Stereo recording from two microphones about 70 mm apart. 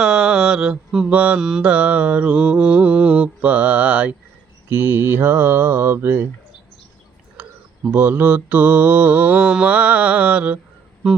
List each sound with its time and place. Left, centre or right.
0.0 s mantra: centre
1.4 s mantra: centre
1.6 s mantra: centre
4.7 s speech: right
7.9 s mantra: right